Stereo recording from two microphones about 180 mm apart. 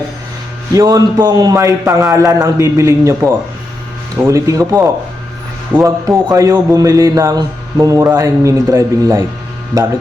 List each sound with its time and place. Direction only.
0.7 s speech: 20° right (ahead or behind)